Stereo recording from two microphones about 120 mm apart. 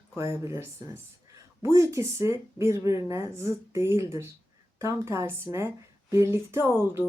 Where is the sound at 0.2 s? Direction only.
25° right (ahead or behind).